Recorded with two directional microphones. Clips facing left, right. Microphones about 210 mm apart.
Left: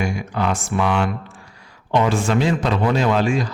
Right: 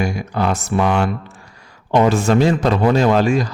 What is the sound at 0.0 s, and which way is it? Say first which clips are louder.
A man's voice: right 2 dB; 40° right (ahead or behind).